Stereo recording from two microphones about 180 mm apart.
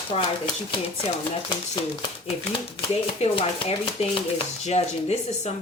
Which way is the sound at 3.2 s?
30° left (ahead or behind).